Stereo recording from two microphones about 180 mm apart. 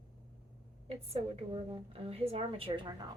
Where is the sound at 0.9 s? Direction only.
30° right (ahead or behind).